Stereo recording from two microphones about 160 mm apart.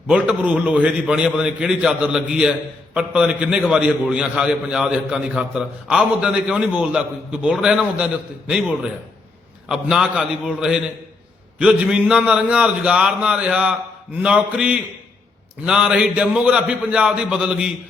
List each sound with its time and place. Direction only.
0.1 s a man's voice: 5° right (ahead or behind)